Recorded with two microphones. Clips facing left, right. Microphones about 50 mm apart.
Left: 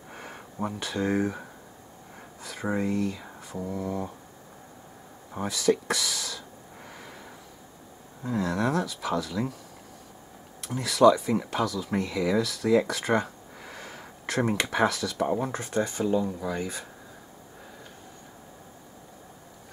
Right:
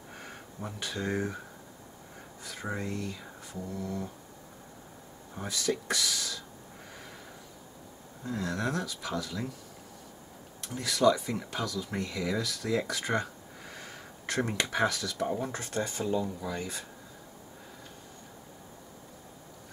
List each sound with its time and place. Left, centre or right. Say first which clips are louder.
0.1 s a sound: left 4 dB; centre
0.7 s speech: left 5 dB; centre
2.4 s a sound: left 6 dB; centre
2.7 s speech: left 8 dB; centre
5.5 s speech: left 6 dB; centre
6.9 s snort: left 3 dB; centre
8.4 s speech: left 6 dB; centre
10.7 s speech: left 6 dB; centre
15.2 s speech: left 4 dB; left
15.5 s speech: left 5 dB; centre